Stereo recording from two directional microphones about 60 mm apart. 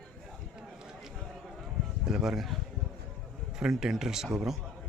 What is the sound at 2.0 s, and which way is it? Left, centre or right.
Speech, centre.